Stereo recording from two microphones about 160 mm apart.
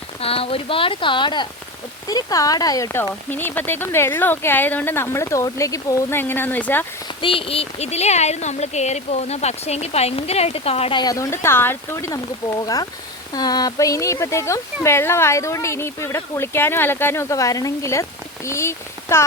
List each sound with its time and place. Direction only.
0.2 s speech: 35° left (ahead or behind); by 6.8 s 10° left (ahead or behind)
7.2 s speech: 35° left (ahead or behind)
11.0 s speech: 20° left (ahead or behind)